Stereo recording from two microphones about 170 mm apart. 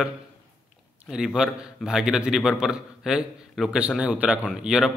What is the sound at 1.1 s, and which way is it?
A man's voice, 5° right (ahead or behind).